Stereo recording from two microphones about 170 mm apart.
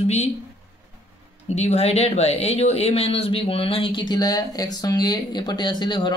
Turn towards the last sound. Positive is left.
turn(degrees=25)  # may be behind; listen again after turning